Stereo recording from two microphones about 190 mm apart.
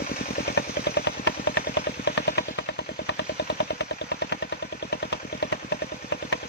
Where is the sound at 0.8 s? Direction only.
65° left (ahead or behind).